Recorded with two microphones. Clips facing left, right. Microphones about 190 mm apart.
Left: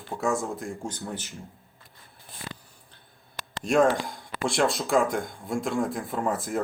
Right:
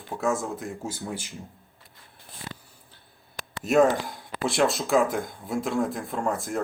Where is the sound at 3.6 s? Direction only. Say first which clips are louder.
Right 1 dB; 5° right (ahead or behind).